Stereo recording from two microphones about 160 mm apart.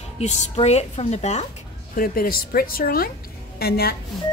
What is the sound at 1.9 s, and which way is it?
A woman's voice, 65° left (ahead or behind).